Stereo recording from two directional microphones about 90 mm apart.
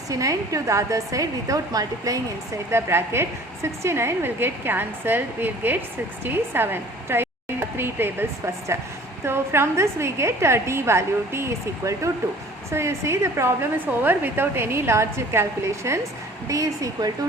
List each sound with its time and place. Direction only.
0.1 s a woman's voice: 40° right (ahead or behind)
2.6 s a woman's voice: 30° right (ahead or behind)